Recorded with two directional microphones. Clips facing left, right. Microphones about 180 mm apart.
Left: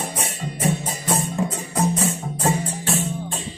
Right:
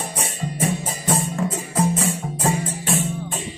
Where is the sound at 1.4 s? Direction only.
15° left (ahead or behind).